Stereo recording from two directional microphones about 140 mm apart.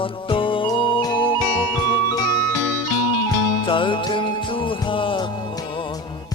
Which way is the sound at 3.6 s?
35° left (ahead or behind).